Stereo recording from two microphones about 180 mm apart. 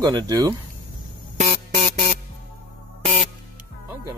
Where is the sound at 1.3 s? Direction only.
35° right (ahead or behind).